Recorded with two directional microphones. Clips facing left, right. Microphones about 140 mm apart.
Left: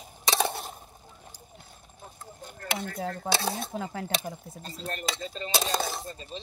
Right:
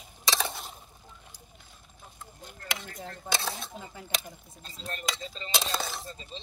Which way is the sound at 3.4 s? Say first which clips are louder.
Left 5 dB; 40° left (ahead or behind).